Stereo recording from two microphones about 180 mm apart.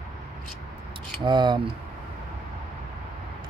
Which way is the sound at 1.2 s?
25° right (ahead or behind).